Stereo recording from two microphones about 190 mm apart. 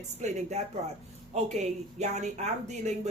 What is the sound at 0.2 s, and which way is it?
Speech, 35° right (ahead or behind).